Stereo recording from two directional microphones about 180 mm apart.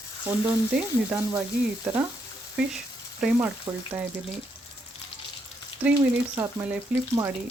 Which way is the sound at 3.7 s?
25° right (ahead or behind).